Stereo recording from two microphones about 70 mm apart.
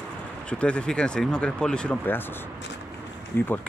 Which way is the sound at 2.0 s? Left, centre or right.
Left.